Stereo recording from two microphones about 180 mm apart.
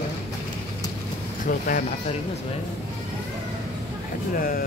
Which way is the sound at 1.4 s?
45° left (ahead or behind).